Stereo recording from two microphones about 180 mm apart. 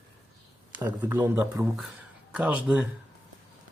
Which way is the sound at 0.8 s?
15° right (ahead or behind).